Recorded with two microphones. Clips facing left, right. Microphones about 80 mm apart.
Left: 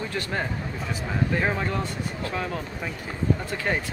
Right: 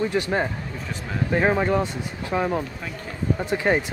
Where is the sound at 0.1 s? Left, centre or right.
Centre.